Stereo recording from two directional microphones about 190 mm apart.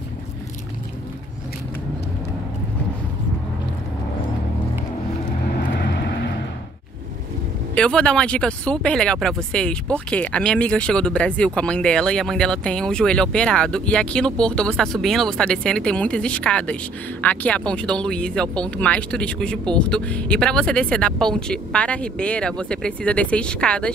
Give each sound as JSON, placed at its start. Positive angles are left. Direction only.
{"t": 5.8, "sound": "vehicle", "side_deg": 60}
{"t": 7.7, "sound": "speech", "side_deg": 5}